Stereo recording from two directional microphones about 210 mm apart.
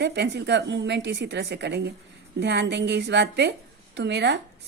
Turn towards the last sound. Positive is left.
turn(degrees=-55)  # may be behind; listen again after turning